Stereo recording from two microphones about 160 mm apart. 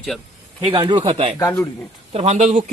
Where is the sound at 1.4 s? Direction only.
20° left (ahead or behind).